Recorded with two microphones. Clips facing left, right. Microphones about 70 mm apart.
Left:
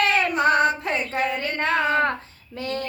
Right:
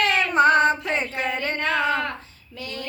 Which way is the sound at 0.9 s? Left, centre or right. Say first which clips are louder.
Left 1 dB; right.